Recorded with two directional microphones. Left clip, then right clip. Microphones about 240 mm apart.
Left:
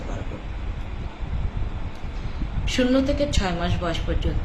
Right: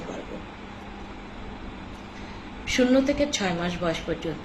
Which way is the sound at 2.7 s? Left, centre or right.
Centre.